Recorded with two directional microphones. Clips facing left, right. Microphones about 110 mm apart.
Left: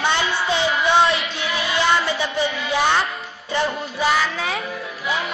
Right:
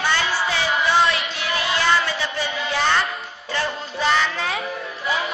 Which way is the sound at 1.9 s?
20° left (ahead or behind).